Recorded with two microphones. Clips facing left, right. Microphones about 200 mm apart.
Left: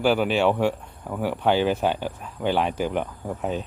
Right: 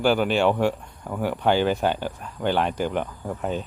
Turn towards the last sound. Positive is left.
turn(degrees=0)  # may be behind; listen again after turning